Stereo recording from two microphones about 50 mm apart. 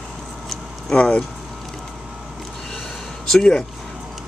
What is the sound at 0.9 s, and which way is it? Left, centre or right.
Speech, left.